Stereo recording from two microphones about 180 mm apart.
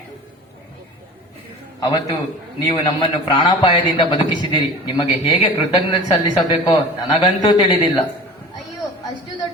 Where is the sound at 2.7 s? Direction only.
25° left (ahead or behind).